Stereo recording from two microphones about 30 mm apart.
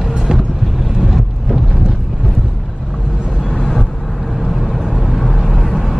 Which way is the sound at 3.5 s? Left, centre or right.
Left.